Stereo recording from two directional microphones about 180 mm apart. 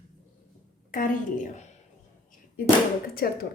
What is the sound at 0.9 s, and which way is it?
Speech, 50° left (ahead or behind).